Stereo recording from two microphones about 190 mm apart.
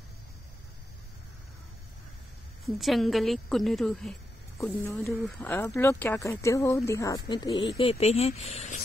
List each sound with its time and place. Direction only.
2.6 s a woman's voice: centre (ahead or behind)
4.6 s speech: 15° left (ahead or behind); by 8.8 s 35° left (ahead or behind)